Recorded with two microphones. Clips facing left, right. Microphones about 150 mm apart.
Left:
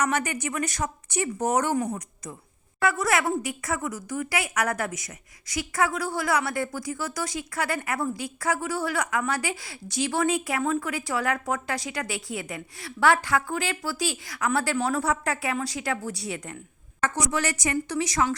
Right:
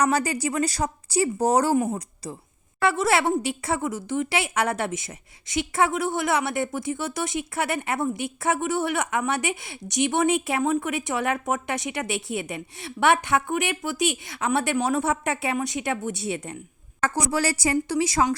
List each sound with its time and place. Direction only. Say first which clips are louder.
0.0 s a woman's voice: right 4 dB; 35° right (ahead or behind)